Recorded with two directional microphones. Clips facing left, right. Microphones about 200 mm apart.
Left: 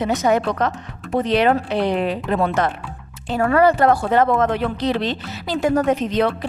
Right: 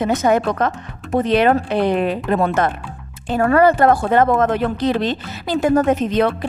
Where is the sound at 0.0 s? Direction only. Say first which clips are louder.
Right 2 dB; 50° right (ahead or behind).